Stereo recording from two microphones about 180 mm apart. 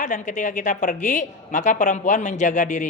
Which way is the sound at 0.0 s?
45° left (ahead or behind).